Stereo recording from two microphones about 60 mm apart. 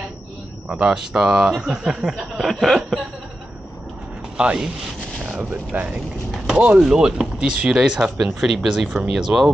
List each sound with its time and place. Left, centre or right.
0.7 s speech: centre
4.4 s speech: right
5.2 s a sound: centre
5.5 s speech: right; by 9.5 s centre